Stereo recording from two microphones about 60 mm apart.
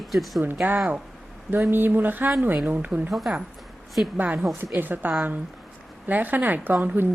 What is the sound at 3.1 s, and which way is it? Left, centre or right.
Speech, centre.